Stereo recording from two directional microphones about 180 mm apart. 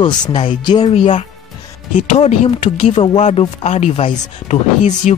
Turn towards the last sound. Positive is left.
turn(degrees=40)  # may be behind; listen again after turning